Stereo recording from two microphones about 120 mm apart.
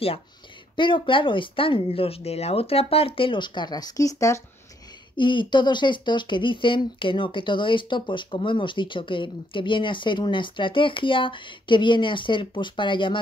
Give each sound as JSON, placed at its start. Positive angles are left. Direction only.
{"t": 0.7, "sound": "speech", "side_deg": 45}
{"t": 5.1, "sound": "speech", "side_deg": 40}